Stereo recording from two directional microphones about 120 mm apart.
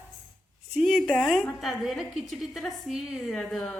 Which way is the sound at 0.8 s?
Centre (ahead or behind).